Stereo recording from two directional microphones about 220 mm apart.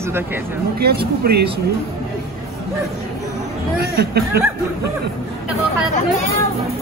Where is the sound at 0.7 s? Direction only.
45° right (ahead or behind).